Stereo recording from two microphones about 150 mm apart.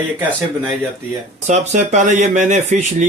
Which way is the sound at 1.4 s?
50° right (ahead or behind).